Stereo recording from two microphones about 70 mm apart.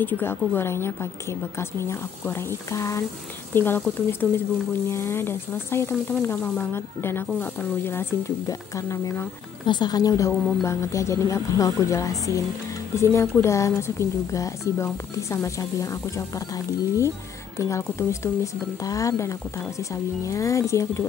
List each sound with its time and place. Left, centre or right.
0.0 s a woman's voice: left
3.5 s speech: left
6.7 s speech: left
8.5 s a woman's voice: left
9.7 s a woman's voice: left
12.9 s a woman's voice: left